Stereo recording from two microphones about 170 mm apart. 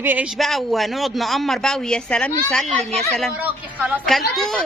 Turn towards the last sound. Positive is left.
turn(degrees=0)  # may be behind; listen again after turning